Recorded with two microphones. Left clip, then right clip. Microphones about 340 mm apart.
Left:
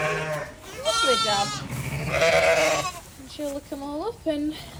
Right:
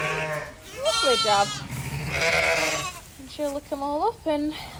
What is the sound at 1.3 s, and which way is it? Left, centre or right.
Goat, centre.